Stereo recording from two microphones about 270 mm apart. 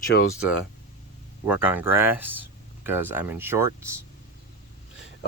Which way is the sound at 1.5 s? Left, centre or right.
Centre.